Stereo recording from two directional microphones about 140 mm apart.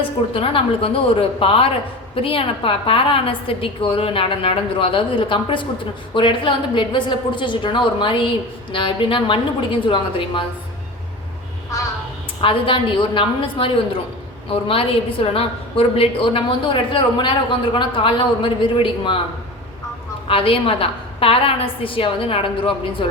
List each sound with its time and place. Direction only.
0.3 s a woman's voice: 40° left (ahead or behind)
12.4 s a woman's voice: 35° left (ahead or behind)
20.2 s a woman's voice: 40° left (ahead or behind)